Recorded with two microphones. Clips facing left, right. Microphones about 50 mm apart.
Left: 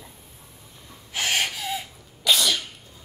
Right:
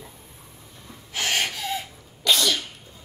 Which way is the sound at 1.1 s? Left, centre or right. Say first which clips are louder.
Even; centre.